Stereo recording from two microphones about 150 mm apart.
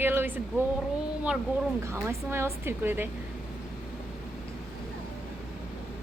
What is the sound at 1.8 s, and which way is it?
A woman's voice, 15° right (ahead or behind).